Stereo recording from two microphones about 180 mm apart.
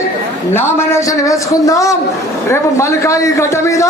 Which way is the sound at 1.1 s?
20° left (ahead or behind).